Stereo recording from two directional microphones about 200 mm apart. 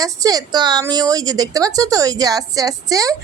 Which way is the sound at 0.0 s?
15° right (ahead or behind).